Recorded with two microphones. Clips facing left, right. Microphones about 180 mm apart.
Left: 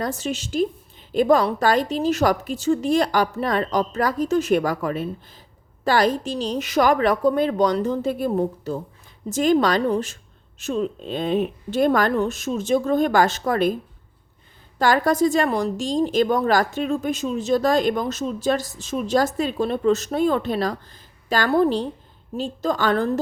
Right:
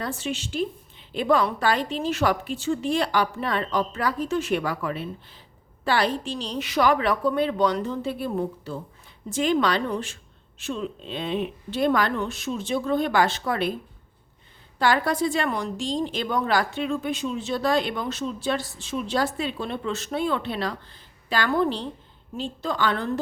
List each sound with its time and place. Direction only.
0.0 s a woman's voice: 40° left (ahead or behind)
14.8 s a woman's voice: 45° left (ahead or behind)